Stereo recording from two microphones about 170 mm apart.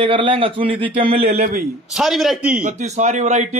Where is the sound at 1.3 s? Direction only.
60° right (ahead or behind).